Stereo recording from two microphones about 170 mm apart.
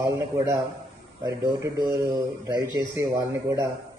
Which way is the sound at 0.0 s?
20° right (ahead or behind).